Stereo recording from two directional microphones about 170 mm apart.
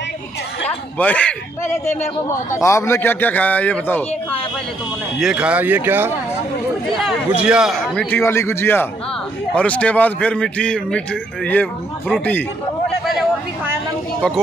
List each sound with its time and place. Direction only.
0.7 s a man's voice: 10° left (ahead or behind)
5.2 s a man's voice: 5° right (ahead or behind)
8.2 s a man's voice: 15° left (ahead or behind)